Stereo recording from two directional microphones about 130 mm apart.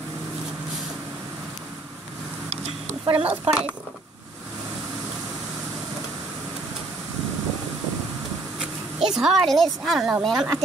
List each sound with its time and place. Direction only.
2.5 s a sound: 50° right (ahead or behind)
3.3 s speech: 10° right (ahead or behind)
8.5 s speech: 5° right (ahead or behind)